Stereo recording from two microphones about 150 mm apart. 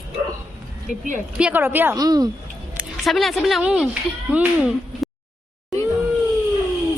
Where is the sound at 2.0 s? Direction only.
25° right (ahead or behind).